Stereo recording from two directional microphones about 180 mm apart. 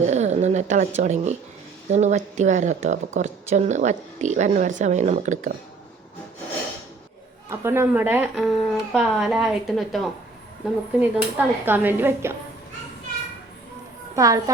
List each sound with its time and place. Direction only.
0.1 s a sound: 40° right (ahead or behind)
1.0 s speech: 40° right (ahead or behind)
7.5 s speech: 15° right (ahead or behind)
8.4 s a woman's voice: centre (ahead or behind)
14.2 s a child's voice: 20° right (ahead or behind)